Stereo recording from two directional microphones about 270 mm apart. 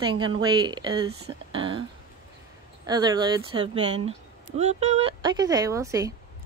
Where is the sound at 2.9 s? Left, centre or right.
Centre.